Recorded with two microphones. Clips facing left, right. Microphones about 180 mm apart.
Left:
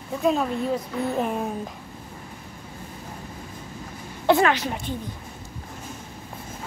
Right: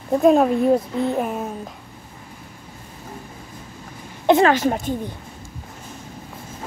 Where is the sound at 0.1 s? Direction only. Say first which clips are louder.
Right 8 dB; 50° right (ahead or behind).